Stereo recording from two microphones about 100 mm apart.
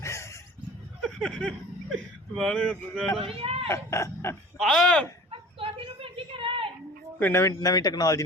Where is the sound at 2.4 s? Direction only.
5° left (ahead or behind).